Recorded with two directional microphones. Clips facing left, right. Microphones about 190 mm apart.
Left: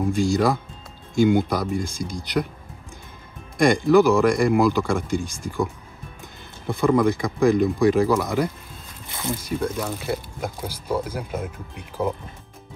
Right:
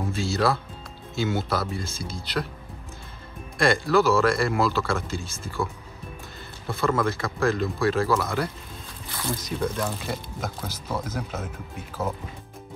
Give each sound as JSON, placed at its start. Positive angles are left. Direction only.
{"t": 0.0, "sound": "speech", "side_deg": 15}
{"t": 3.5, "sound": "speech", "side_deg": 15}
{"t": 6.7, "sound": "speech", "side_deg": 15}